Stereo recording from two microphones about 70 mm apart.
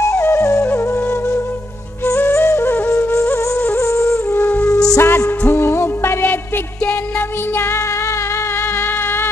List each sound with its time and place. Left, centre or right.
0.2 s flute: left
0.7 s flute: left
2.0 s music: left
2.9 s flute: left
3.7 s music: left
4.4 s music: left
4.6 s music: left
5.0 s music: left
6.2 s music: left
7.5 s music: left
8.7 s a sound: left